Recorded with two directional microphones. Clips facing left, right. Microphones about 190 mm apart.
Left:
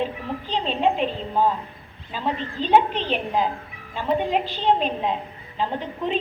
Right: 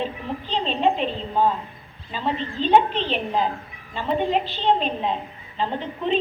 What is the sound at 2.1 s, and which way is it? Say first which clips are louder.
A woman's voice: right 1 dB; 10° left (ahead or behind).